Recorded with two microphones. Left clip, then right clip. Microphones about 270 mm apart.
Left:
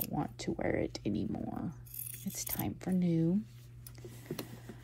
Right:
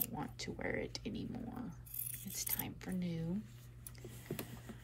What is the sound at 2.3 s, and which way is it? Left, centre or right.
Speech, centre.